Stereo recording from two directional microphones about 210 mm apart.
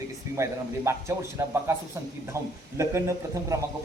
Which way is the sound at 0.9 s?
15° right (ahead or behind).